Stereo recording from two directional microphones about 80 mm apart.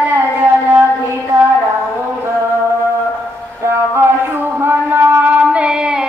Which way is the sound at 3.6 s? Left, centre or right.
Right.